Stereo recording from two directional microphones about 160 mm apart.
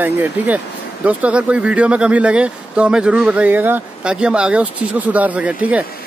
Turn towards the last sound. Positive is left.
turn(degrees=-10)  # may be behind; listen again after turning